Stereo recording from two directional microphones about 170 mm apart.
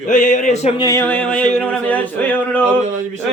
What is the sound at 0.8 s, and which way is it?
Speech, 20° left (ahead or behind).